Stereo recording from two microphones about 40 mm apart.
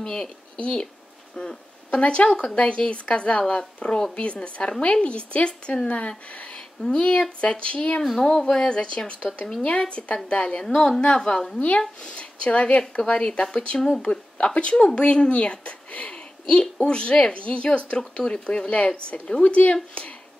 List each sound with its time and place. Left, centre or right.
0.6 s speech: left
1.3 s speech: centre
1.9 s a woman's voice: left
13.7 s a woman's voice: centre
14.4 s speech: left
16.4 s speech: centre